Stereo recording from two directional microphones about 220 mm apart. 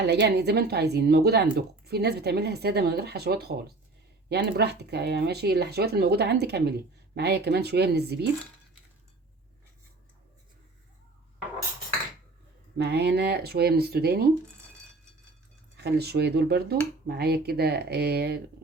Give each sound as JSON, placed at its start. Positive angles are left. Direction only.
{"t": 0.0, "sound": "speech", "side_deg": -50}
{"t": 12.7, "sound": "speech", "side_deg": -50}
{"t": 15.8, "sound": "speech", "side_deg": -45}